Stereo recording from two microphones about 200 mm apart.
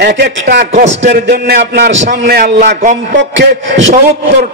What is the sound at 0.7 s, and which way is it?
Speech, 35° right (ahead or behind).